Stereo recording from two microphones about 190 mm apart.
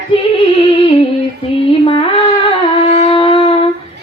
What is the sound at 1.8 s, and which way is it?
Shofar, 30° left (ahead or behind).